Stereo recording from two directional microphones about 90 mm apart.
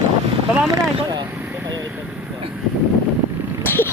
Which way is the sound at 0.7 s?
45° right (ahead or behind).